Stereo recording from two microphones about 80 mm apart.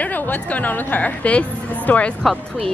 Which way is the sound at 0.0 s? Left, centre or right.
Left.